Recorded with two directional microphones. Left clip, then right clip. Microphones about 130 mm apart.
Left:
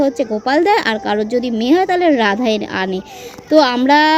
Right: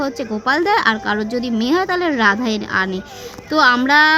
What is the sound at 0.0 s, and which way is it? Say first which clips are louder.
A woman's voice: left 5 dB; centre (ahead or behind).